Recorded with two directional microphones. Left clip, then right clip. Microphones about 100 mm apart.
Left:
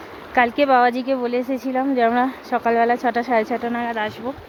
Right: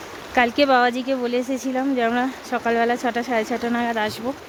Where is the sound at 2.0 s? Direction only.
5° left (ahead or behind).